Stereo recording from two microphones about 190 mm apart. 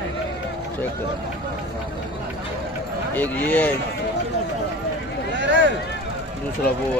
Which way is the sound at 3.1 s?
10° left (ahead or behind).